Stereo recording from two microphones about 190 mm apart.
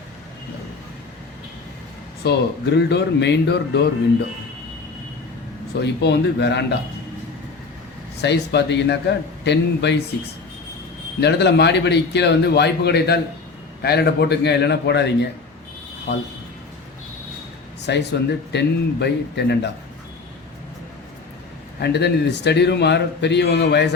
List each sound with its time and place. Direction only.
2.2 s a man's voice: 60° left (ahead or behind)
5.8 s a man's voice: 65° left (ahead or behind)
8.2 s a man's voice: 65° left (ahead or behind)
11.2 s a man's voice: 60° left (ahead or behind)
17.8 s a man's voice: 65° left (ahead or behind)
21.8 s a man's voice: 60° left (ahead or behind)